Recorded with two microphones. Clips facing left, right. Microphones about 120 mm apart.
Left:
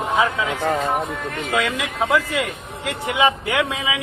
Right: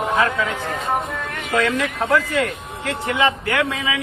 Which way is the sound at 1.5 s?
10° left (ahead or behind).